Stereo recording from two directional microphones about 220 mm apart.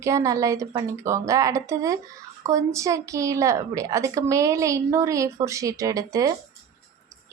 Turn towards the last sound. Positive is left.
turn(degrees=-15)  # may be behind; listen again after turning